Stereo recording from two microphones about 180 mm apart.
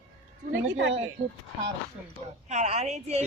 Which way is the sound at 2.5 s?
40° right (ahead or behind).